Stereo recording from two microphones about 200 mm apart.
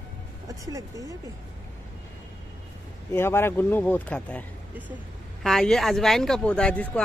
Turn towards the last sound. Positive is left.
turn(degrees=5)  # may be behind; listen again after turning